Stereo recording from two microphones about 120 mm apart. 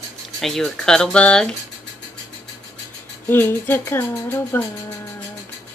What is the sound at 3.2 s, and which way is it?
Speech, 15° left (ahead or behind).